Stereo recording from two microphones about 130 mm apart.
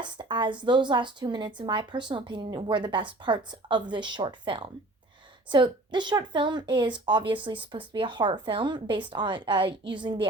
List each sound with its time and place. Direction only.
0.0 s speech: 40° right (ahead or behind)